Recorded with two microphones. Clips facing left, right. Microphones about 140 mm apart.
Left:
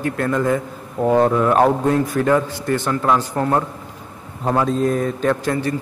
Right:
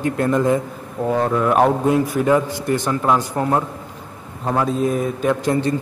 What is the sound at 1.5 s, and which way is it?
Speech, 10° right (ahead or behind).